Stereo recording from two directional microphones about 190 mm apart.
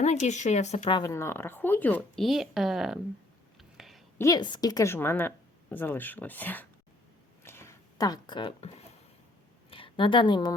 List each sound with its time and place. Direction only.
0.0 s speech: 35° left (ahead or behind)
0.9 s a woman's voice: 15° left (ahead or behind); by 3.0 s centre (ahead or behind)
3.6 s a sound: centre (ahead or behind)
4.2 s a woman's voice: 20° left (ahead or behind)
7.4 s a sound: 15° left (ahead or behind)
9.6 s a woman's voice: 30° left (ahead or behind)